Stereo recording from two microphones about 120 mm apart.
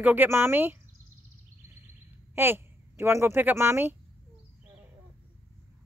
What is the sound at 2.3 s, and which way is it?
A woman's voice, 20° right (ahead or behind).